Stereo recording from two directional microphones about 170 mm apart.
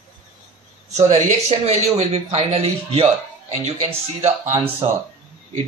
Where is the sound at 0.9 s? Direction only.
40° right (ahead or behind).